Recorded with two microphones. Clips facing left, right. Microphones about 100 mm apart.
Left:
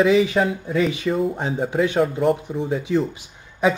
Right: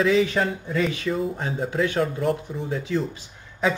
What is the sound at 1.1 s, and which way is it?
Speech, centre (ahead or behind).